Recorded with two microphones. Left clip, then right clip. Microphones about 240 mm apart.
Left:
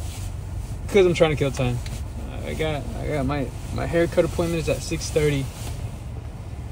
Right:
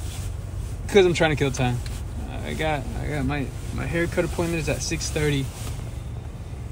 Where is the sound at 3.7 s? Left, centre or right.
Centre.